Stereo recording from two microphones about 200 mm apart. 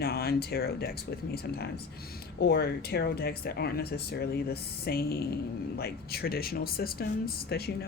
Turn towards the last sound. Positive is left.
turn(degrees=50)  # may be behind; listen again after turning